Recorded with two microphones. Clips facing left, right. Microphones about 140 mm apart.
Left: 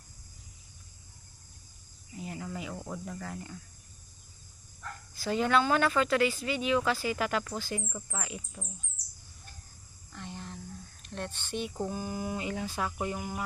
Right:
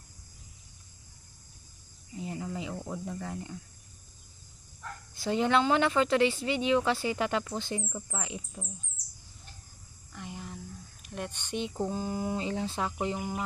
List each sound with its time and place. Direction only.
2.1 s cricket: 25° right (ahead or behind)
2.7 s cricket: 10° right (ahead or behind)
3.1 s speech: 20° right (ahead or behind)
5.1 s speech: 25° right (ahead or behind)
10.1 s a sound: 10° right (ahead or behind)
11.9 s speech: 25° right (ahead or behind)